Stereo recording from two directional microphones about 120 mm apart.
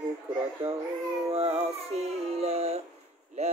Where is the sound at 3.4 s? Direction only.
65° right (ahead or behind).